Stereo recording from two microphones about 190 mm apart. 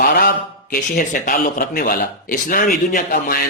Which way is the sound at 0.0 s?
50° left (ahead or behind).